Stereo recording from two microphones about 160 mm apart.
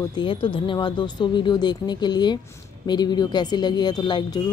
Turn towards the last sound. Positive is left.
turn(degrees=30)  # may be behind; listen again after turning